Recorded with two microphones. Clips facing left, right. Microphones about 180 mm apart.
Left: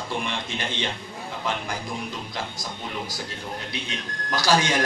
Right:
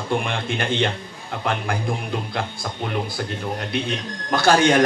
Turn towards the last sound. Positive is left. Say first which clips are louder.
# right 6 dB
turn(degrees=-55)  # may be behind; listen again after turning